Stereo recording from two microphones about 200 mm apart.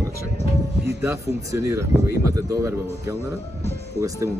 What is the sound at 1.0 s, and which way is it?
Speech, 15° right (ahead or behind).